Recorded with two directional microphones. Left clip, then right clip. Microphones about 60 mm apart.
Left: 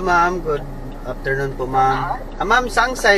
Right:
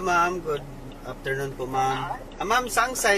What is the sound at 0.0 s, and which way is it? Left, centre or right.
Speech, right.